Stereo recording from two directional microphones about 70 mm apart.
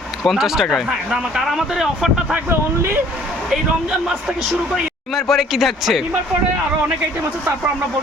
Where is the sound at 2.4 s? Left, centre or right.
Right.